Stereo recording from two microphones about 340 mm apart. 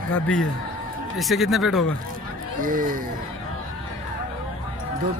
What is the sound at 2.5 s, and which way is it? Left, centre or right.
Speech, right.